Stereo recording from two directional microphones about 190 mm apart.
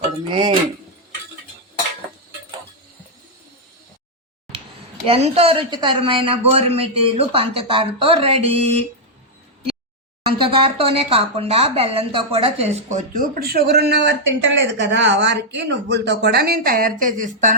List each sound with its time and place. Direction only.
0.3 s a woman's voice: 25° right (ahead or behind)
5.0 s a woman's voice: 30° right (ahead or behind)
10.2 s speech: 30° right (ahead or behind)